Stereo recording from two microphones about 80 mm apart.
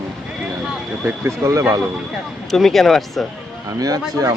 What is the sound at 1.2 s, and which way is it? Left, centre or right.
Speech, right.